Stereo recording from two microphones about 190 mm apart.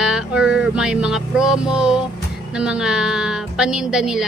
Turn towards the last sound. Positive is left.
turn(degrees=-5)  # may be behind; listen again after turning